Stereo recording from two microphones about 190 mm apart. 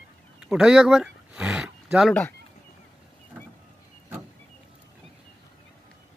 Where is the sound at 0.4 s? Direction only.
5° right (ahead or behind).